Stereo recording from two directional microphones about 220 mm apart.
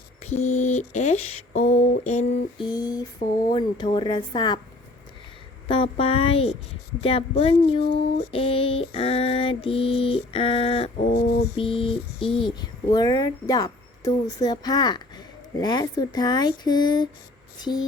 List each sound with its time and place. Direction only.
0.2 s a sound: 30° left (ahead or behind)
2.6 s a sound: 20° left (ahead or behind)
3.5 s mantra: 20° left (ahead or behind)
5.6 s mantra: 25° left (ahead or behind)
11.1 s a sound: 45° left (ahead or behind)
11.5 s mantra: 25° left (ahead or behind)
12.3 s speech: centre (ahead or behind)
12.5 s speech: 20° left (ahead or behind)
17.6 s mantra: 20° left (ahead or behind)